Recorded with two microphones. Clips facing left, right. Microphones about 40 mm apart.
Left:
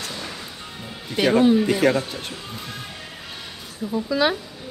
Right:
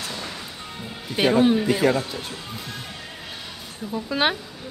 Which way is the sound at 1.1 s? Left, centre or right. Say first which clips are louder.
Left 1 dB; centre.